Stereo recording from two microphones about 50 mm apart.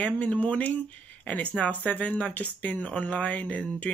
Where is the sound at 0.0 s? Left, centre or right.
Left.